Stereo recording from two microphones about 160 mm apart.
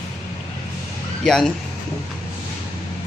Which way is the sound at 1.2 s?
5° left (ahead or behind).